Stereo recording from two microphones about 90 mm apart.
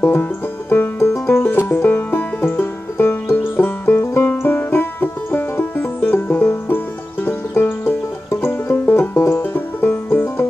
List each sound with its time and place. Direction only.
0.0 s banjo: 20° left (ahead or behind)
1.3 s music: 25° left (ahead or behind)